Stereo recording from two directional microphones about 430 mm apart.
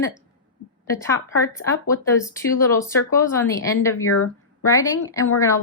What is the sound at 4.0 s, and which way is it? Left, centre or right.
Speech, left.